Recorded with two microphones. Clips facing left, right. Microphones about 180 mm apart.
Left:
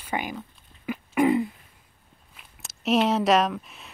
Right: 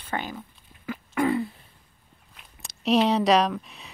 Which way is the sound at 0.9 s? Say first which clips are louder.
Left 3 dB; 20° left (ahead or behind).